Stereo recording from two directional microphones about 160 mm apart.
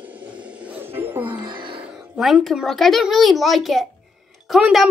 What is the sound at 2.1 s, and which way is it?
A child's voice, centre (ahead or behind).